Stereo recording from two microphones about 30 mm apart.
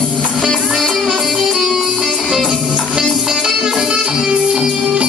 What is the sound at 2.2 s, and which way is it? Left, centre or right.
Music, right.